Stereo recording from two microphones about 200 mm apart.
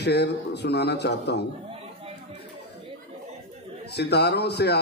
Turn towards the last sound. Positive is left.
turn(degrees=55)  # may be behind; listen again after turning